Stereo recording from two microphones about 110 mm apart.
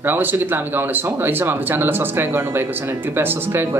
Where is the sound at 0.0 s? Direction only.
20° right (ahead or behind).